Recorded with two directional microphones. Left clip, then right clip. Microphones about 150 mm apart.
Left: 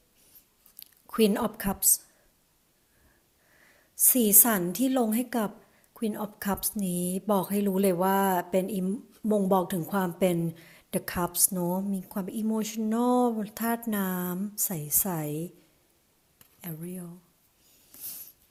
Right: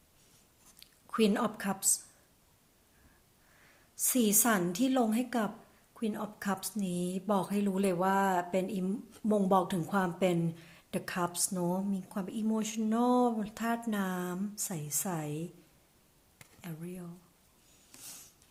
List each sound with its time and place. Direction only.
0.8 s speech: 40° left (ahead or behind)
3.7 s a sound: 40° left (ahead or behind)
4.7 s speech: 40° left (ahead or behind)
8.8 s speech: 25° left (ahead or behind)
16.6 s speech: 40° left (ahead or behind)